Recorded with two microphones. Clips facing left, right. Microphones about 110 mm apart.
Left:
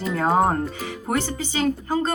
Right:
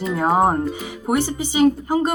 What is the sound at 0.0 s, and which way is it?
Speech, 5° right (ahead or behind).